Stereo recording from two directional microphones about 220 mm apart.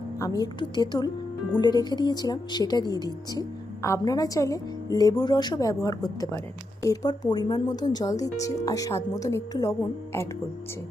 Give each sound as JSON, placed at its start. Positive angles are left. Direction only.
{"t": 0.2, "sound": "a woman's voice", "side_deg": 15}